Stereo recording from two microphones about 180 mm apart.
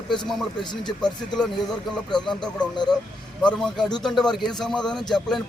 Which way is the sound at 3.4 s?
5° left (ahead or behind).